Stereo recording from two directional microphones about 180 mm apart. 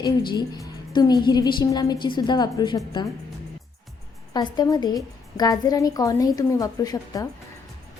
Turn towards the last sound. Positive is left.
turn(degrees=20)  # may be behind; listen again after turning